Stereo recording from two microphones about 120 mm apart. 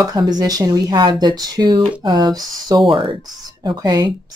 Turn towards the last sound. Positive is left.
turn(degrees=-35)  # may be behind; listen again after turning